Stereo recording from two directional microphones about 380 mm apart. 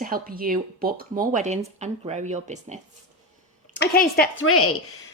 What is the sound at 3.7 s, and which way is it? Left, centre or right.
A woman's voice, left.